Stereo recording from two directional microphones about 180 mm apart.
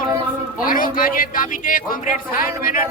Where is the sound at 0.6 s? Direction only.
50° left (ahead or behind).